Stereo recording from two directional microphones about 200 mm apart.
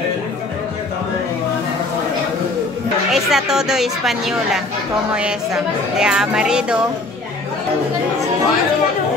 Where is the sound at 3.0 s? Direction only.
Centre (ahead or behind).